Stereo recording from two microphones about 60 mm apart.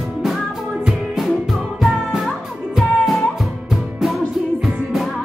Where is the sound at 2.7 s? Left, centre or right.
Centre.